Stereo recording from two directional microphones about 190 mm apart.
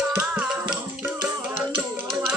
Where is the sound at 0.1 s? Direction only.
5° right (ahead or behind).